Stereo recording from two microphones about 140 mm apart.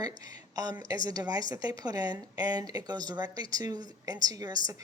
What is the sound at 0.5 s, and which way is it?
A woman's voice, 25° right (ahead or behind).